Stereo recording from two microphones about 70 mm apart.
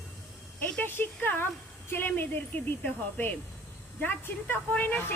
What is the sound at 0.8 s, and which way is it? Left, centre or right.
Speech, left.